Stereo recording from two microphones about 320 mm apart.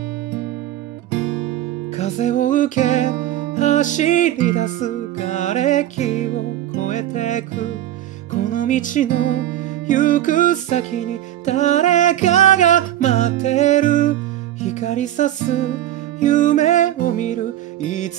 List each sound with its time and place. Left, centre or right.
2.0 s music: left